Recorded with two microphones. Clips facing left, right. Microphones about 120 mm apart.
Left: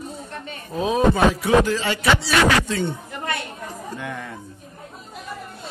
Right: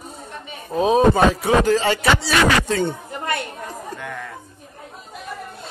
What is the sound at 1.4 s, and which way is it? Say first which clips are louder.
Speech: right 2 dB; 40° right (ahead or behind).